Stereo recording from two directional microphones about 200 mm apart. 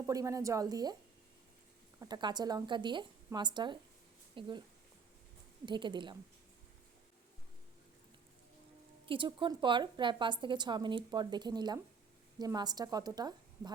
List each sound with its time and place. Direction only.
0.0 s speech: 15° right (ahead or behind)
2.0 s a woman's voice: 20° right (ahead or behind)
5.6 s a woman's voice: 25° right (ahead or behind)
9.0 s a woman's voice: 25° right (ahead or behind)